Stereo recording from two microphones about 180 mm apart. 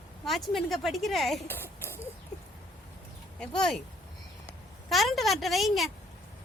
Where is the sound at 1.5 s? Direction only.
10° left (ahead or behind).